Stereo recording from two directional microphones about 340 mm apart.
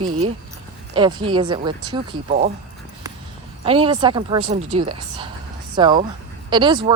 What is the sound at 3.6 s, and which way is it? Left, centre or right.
Speech, centre.